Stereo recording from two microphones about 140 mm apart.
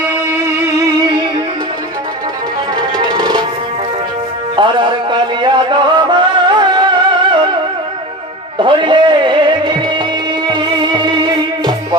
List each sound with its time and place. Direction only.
0.3 s music: 20° right (ahead or behind)
3.0 s music: 30° right (ahead or behind)
4.6 s music: 35° right (ahead or behind)
8.5 s music: 35° right (ahead or behind)